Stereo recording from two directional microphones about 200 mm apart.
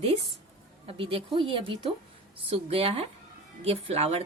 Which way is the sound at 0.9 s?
25° right (ahead or behind).